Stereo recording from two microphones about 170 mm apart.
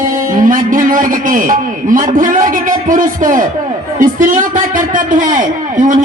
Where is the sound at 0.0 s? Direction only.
50° right (ahead or behind).